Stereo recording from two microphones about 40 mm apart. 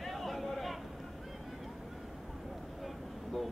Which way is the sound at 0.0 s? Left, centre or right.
Centre.